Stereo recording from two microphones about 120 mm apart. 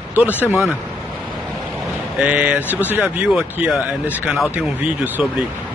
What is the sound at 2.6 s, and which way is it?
Speech, 20° left (ahead or behind).